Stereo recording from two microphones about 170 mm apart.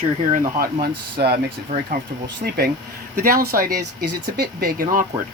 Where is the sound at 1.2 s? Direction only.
70° right (ahead or behind).